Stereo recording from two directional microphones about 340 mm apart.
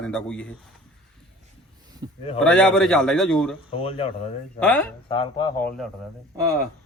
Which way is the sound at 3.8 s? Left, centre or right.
Centre.